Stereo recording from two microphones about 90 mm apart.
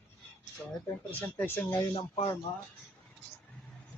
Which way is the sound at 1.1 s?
20° left (ahead or behind).